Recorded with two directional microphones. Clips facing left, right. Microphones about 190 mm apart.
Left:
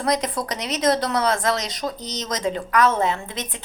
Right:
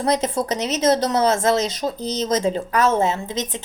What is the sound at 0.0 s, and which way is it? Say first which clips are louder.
Speech: right 3 dB; 25° right (ahead or behind).